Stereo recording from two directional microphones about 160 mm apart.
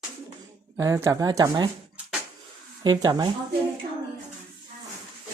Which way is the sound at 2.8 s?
25° right (ahead or behind).